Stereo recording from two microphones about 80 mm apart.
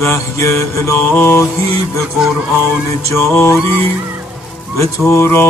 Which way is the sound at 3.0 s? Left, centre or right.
Left.